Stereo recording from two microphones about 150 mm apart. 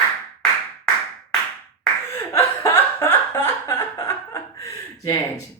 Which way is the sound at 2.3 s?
15° left (ahead or behind).